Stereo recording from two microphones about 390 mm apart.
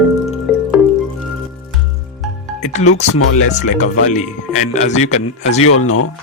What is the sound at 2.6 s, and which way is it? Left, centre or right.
Music, centre.